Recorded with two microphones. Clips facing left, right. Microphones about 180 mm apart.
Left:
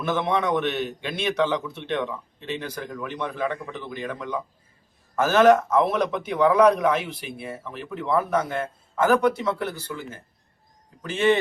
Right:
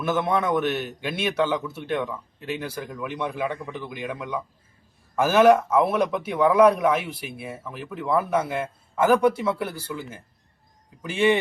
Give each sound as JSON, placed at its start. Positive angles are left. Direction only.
{"t": 0.0, "sound": "speech", "side_deg": -5}